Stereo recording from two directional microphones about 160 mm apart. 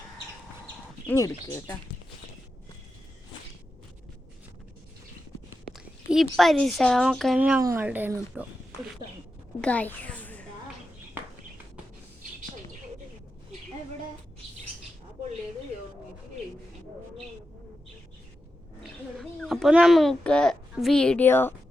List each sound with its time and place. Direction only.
1.0 s speech: 15° left (ahead or behind)
5.7 s speech: centre (ahead or behind)
7.6 s speech: 20° right (ahead or behind)
9.6 s a child's voice: 10° left (ahead or behind)
18.8 s a sound: centre (ahead or behind)